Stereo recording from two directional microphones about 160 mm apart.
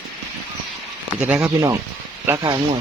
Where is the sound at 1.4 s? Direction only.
15° right (ahead or behind).